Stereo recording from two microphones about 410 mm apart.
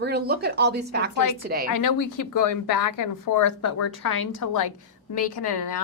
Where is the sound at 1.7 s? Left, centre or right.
Left.